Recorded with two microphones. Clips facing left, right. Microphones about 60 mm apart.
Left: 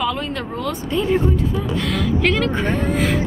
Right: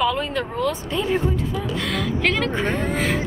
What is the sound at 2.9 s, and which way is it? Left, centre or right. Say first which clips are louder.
Speech: left 3 dB; centre.